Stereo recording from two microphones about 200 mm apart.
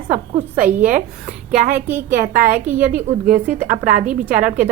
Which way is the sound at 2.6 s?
10° right (ahead or behind).